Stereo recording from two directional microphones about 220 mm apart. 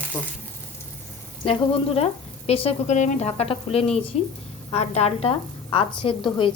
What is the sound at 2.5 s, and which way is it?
Speech, 25° left (ahead or behind).